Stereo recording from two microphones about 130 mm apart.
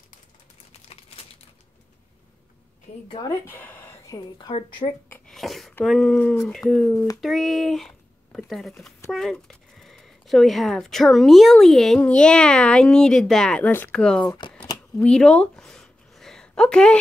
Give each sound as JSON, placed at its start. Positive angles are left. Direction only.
{"t": 3.2, "sound": "speech", "side_deg": 20}
{"t": 4.1, "sound": "a woman's voice", "side_deg": 30}
{"t": 4.5, "sound": "a woman's voice", "side_deg": 40}
{"t": 5.1, "sound": "a sound", "side_deg": 5}
{"t": 5.9, "sound": "speech", "side_deg": 5}
{"t": 6.9, "sound": "speech", "side_deg": 25}
{"t": 7.2, "sound": "speech", "side_deg": 0}
{"t": 13.7, "sound": "speech", "side_deg": 15}
{"t": 13.9, "sound": "speech", "side_deg": 5}
{"t": 15.0, "sound": "a sound", "side_deg": 5}